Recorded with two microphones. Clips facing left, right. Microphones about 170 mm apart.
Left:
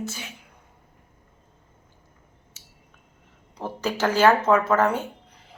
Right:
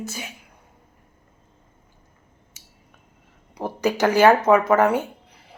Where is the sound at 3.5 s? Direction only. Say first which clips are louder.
Right 5 dB; 15° right (ahead or behind).